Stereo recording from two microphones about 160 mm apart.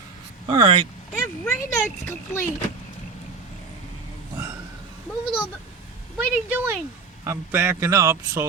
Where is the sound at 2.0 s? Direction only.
15° left (ahead or behind).